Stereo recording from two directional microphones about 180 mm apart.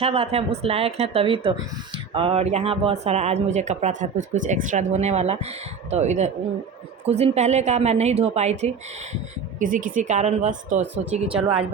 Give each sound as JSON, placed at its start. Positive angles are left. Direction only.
{"t": 0.0, "sound": "speech", "side_deg": -30}